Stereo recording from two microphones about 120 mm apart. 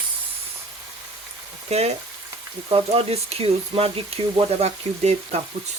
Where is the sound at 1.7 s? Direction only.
60° right (ahead or behind).